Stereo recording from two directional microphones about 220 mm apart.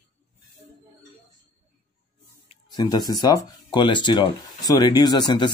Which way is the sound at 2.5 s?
20° left (ahead or behind).